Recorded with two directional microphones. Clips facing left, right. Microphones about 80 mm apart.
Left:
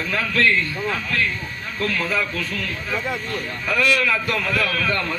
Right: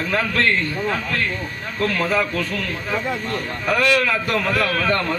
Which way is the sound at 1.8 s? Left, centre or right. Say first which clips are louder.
Right 3 dB; right.